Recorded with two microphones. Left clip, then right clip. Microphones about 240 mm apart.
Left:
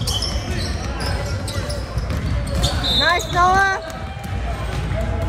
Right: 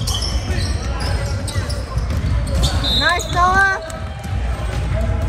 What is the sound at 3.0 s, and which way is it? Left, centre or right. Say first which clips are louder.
Basketball bounce: even; left.